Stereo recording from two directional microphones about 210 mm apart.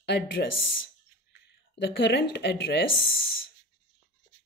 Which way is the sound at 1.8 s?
55° left (ahead or behind).